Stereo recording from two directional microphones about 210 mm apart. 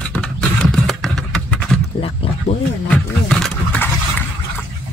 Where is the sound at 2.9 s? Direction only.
Centre (ahead or behind).